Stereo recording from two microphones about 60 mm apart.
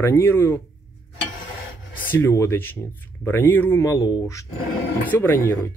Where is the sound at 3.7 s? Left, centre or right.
Left.